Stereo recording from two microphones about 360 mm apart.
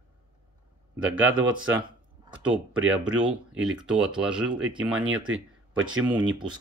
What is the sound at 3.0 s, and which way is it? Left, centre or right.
Speech, centre.